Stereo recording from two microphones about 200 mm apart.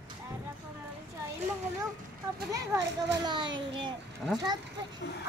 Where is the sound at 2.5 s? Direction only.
20° right (ahead or behind).